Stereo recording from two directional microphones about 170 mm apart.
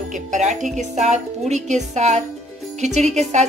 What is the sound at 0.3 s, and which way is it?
Speech, 45° right (ahead or behind).